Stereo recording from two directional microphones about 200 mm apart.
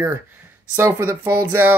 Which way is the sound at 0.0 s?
10° right (ahead or behind).